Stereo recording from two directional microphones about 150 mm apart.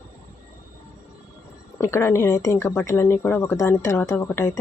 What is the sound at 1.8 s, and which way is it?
Speech, 15° left (ahead or behind).